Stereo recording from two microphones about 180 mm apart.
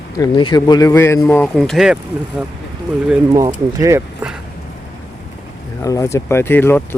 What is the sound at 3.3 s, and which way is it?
Speech, 20° right (ahead or behind).